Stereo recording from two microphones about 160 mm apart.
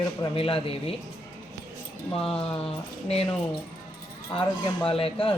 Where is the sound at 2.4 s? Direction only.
35° left (ahead or behind).